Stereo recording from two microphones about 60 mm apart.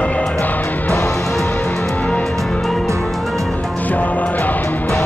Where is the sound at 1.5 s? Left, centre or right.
Left.